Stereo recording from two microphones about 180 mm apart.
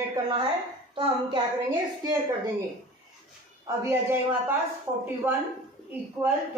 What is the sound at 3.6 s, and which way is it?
Speech, 15° right (ahead or behind).